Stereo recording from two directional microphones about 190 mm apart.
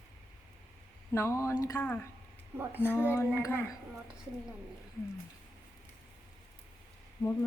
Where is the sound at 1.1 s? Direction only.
15° left (ahead or behind).